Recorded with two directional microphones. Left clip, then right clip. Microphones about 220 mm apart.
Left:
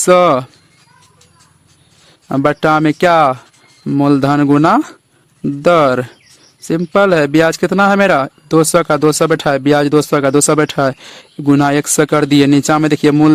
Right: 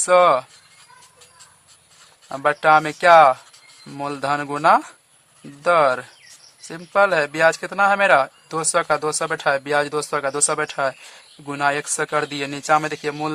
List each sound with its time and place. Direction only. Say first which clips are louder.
0.0 s speech: left 5 dB; 40° left (ahead or behind)
2.3 s speech: left 3 dB; 40° left (ahead or behind)